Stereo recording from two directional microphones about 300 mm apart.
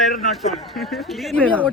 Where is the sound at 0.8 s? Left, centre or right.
Centre.